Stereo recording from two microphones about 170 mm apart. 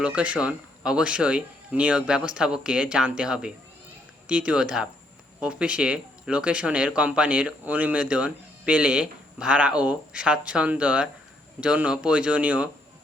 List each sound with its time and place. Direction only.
0.0 s speech: 5° right (ahead or behind)